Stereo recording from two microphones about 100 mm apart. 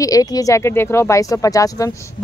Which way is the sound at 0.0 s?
35° left (ahead or behind).